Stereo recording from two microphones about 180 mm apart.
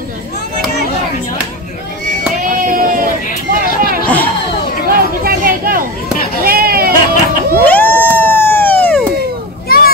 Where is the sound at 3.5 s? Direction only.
55° right (ahead or behind).